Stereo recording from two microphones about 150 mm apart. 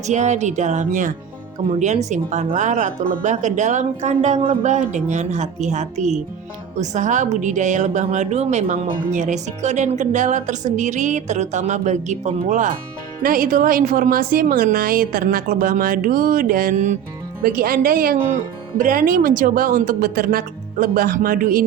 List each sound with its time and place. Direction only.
0.1 s a woman's voice: 50° right (ahead or behind)
13.2 s a woman's voice: 70° right (ahead or behind)
17.4 s a woman's voice: 75° right (ahead or behind)